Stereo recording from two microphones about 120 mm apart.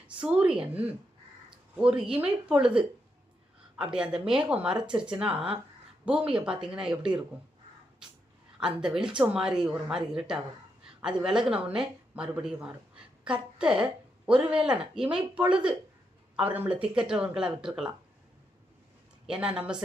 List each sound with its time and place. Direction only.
0.1 s speech: 10° right (ahead or behind)
1.5 s a sound: 10° right (ahead or behind)
2.5 s speech: 10° right (ahead or behind)
8.6 s a woman's voice: 5° right (ahead or behind)
19.3 s speech: 10° right (ahead or behind)